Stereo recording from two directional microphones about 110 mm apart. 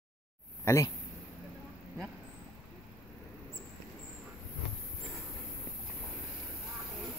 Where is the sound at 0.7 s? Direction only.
30° left (ahead or behind).